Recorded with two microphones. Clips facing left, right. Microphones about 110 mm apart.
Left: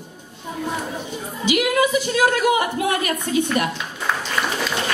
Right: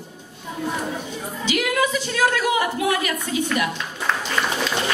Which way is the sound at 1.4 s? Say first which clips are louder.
Left 3 dB; 15° left (ahead or behind).